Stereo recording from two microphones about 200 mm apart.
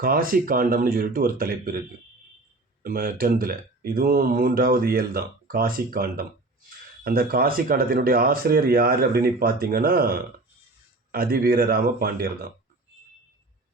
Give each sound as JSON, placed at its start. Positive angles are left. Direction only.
{"t": 0.0, "sound": "speech", "side_deg": -45}
{"t": 2.8, "sound": "speech", "side_deg": -45}